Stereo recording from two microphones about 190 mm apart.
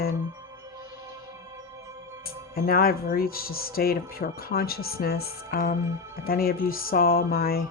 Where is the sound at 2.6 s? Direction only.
50° left (ahead or behind).